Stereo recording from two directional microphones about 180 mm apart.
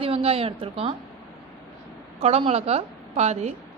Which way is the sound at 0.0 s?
35° right (ahead or behind).